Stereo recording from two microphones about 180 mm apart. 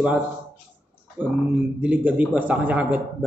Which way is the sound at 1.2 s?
10° right (ahead or behind).